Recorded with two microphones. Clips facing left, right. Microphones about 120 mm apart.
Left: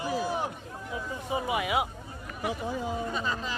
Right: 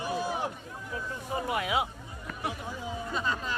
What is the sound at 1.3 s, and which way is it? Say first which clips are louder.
Speech: left 1 dB; 10° left (ahead or behind).